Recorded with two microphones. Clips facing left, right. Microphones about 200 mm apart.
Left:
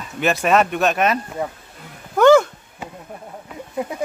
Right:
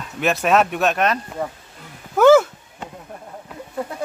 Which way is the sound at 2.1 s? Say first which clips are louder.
Even; 5° right (ahead or behind).